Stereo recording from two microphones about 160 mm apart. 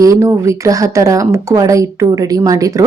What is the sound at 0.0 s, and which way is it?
A woman's voice, 20° right (ahead or behind).